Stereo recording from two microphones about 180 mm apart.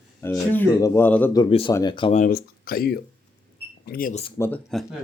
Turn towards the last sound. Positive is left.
turn(degrees=15)  # may be behind; listen again after turning